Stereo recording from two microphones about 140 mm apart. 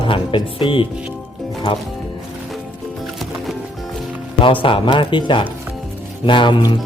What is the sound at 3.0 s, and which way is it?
Music, centre (ahead or behind).